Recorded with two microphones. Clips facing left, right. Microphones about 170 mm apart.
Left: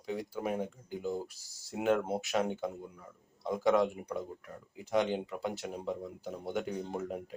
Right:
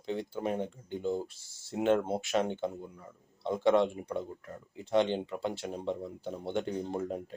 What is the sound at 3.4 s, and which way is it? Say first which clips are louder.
Speech: right 2 dB; 30° right (ahead or behind).